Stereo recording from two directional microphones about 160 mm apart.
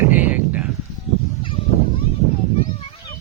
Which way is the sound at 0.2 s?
10° right (ahead or behind).